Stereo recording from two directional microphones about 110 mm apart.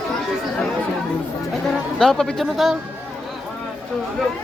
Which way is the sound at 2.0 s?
5° left (ahead or behind).